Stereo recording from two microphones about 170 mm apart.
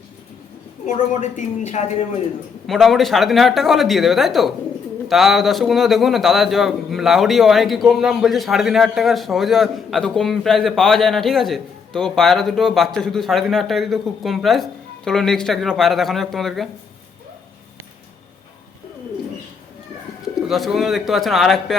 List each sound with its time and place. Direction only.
1.2 s speech: 45° left (ahead or behind)
2.6 s a man's voice: centre (ahead or behind)
20.5 s a man's voice: centre (ahead or behind)